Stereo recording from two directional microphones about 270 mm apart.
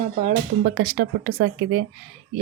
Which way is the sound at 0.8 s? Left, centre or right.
Right.